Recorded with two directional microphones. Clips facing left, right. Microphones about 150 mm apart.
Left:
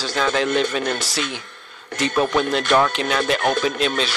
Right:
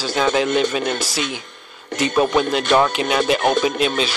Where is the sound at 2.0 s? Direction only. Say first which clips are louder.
Right 2 dB; 15° right (ahead or behind).